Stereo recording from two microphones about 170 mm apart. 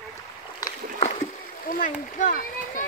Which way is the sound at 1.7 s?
50° left (ahead or behind).